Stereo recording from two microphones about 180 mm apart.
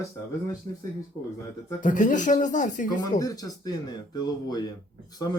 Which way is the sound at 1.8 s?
45° left (ahead or behind).